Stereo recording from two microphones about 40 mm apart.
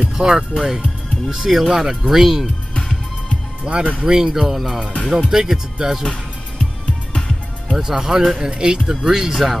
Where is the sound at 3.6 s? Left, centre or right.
Right; by 6.0 s centre.